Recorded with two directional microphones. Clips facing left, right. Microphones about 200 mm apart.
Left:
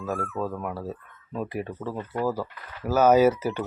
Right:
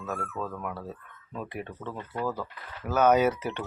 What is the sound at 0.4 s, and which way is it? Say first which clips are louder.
Speech: left 5 dB; 30° left (ahead or behind).